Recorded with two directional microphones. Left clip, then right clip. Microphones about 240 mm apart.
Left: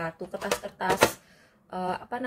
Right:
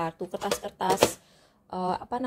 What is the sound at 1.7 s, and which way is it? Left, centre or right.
Speech, centre.